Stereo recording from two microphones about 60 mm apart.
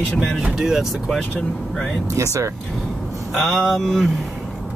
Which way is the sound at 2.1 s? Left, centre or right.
Right.